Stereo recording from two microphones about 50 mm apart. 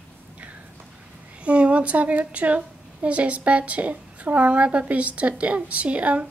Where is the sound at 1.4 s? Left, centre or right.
Right.